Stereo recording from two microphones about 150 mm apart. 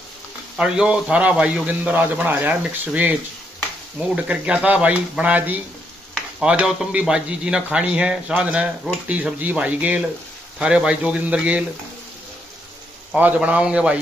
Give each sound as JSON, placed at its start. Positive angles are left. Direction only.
{"t": 0.6, "sound": "speech", "side_deg": -5}
{"t": 13.1, "sound": "speech", "side_deg": -10}